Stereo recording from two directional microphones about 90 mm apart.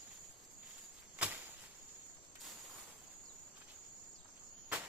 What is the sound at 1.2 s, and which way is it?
Cricket, 15° right (ahead or behind).